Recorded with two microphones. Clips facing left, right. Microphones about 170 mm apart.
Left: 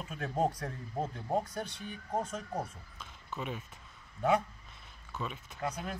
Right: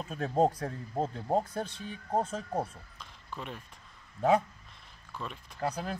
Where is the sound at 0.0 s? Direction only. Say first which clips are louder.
Right 5 dB; 35° right (ahead or behind).